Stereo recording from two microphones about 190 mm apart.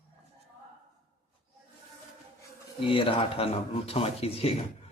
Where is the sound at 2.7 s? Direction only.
25° left (ahead or behind).